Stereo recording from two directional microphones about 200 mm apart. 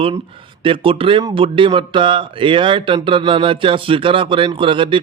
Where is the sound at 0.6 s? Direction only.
25° right (ahead or behind).